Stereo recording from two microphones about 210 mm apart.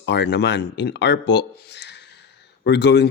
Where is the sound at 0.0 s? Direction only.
55° left (ahead or behind).